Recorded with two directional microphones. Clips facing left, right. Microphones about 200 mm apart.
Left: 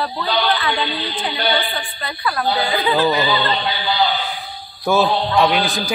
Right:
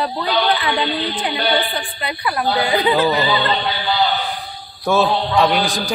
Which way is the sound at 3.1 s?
Centre (ahead or behind).